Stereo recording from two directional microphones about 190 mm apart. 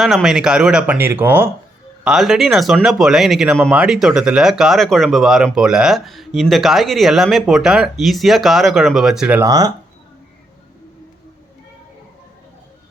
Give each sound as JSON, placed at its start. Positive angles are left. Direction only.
{"t": 0.0, "sound": "speech", "side_deg": 0}
{"t": 9.5, "sound": "speech", "side_deg": -20}